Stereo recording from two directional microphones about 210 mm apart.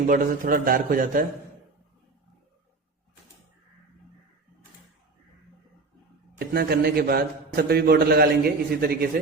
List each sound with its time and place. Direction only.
0.1 s a man's voice: 40° right (ahead or behind)
6.5 s a man's voice: 50° right (ahead or behind)